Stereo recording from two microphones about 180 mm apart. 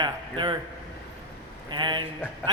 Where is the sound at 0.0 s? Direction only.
25° right (ahead or behind).